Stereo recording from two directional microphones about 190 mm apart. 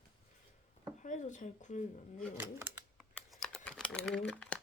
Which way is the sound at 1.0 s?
40° left (ahead or behind).